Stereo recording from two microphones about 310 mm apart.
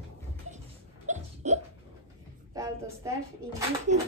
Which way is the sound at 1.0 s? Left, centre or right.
Right.